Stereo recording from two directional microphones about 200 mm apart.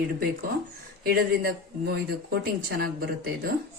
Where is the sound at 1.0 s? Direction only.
50° right (ahead or behind).